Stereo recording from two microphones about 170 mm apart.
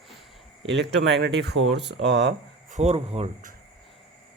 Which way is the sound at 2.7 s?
40° right (ahead or behind).